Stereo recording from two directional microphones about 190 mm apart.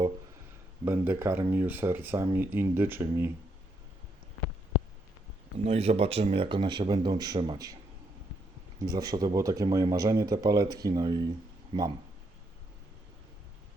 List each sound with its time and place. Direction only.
0.9 s speech: 10° right (ahead or behind)
5.6 s speech: 30° right (ahead or behind)
8.8 s speech: 20° right (ahead or behind)
11.7 s speech: 30° right (ahead or behind)